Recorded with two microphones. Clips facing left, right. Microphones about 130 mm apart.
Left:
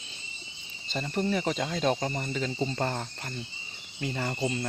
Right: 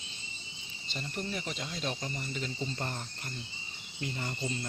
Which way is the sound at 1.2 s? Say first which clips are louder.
Left 10 dB; 45° left (ahead or behind).